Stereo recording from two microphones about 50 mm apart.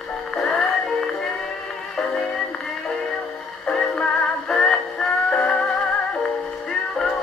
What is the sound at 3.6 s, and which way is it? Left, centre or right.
Music, centre.